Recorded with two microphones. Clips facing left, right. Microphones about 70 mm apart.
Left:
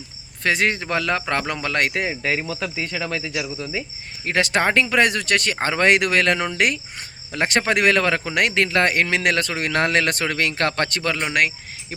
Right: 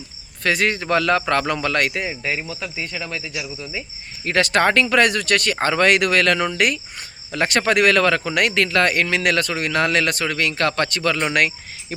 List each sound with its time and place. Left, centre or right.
0.4 s speech: left
1.9 s speech: left
4.3 s speech: centre; by 11.1 s left
11.3 s speech: centre